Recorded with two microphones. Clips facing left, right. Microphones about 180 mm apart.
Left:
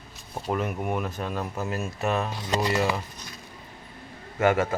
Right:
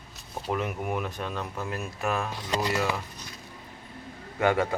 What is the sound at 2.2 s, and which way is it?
Speech, 35° left (ahead or behind).